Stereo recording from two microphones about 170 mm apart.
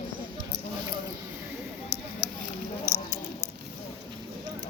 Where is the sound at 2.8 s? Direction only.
20° left (ahead or behind).